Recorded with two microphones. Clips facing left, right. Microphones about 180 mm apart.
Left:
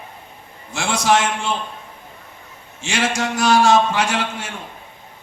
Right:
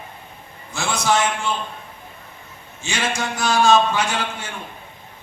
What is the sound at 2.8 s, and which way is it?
A man's voice, 90° left.